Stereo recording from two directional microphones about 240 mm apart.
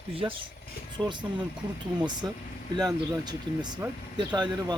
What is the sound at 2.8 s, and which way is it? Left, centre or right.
Speech, centre.